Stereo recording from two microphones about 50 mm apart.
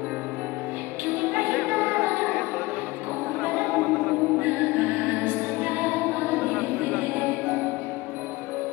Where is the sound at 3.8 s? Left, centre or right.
Left.